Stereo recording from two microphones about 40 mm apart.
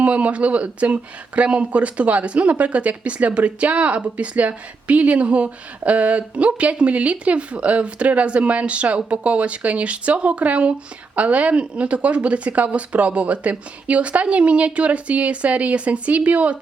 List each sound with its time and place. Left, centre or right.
0.0 s speech: right